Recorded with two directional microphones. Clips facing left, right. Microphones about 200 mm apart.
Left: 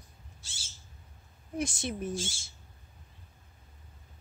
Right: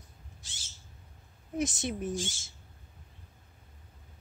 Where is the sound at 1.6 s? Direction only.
20° right (ahead or behind).